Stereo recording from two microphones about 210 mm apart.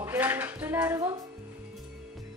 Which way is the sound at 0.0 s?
10° right (ahead or behind).